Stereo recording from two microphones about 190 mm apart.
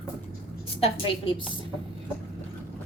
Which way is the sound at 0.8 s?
30° left (ahead or behind).